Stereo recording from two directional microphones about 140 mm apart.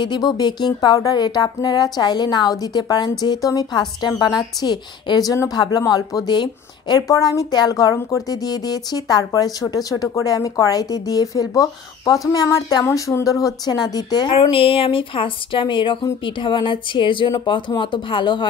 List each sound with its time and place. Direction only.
0.0 s speech: 30° left (ahead or behind)
14.4 s speech: 40° left (ahead or behind)